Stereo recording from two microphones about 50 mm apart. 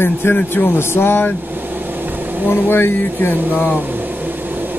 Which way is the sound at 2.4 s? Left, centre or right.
Left.